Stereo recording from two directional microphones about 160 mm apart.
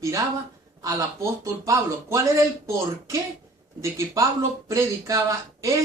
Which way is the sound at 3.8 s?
20° right (ahead or behind).